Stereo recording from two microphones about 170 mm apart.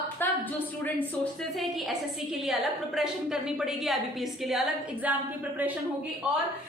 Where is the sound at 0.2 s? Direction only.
10° left (ahead or behind).